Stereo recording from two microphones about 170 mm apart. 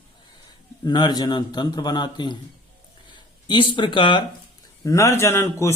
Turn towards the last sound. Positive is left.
turn(degrees=15)  # may be behind; listen again after turning